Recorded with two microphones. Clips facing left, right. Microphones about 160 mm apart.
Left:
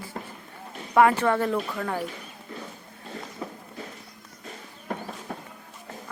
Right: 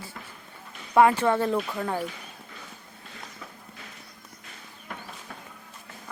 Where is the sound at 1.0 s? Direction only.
20° right (ahead or behind).